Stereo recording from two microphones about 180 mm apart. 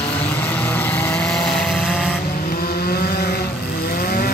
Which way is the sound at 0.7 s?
10° left (ahead or behind).